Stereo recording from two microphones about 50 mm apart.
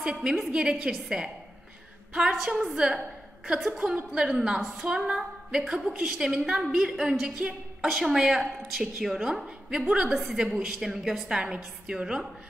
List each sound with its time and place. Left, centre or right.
0.0 s a woman's voice: centre
2.7 s a woman's voice: centre
3.8 s a woman's voice: centre
4.8 s female singing: centre
5.7 s a woman's voice: centre
7.8 s a woman's voice: centre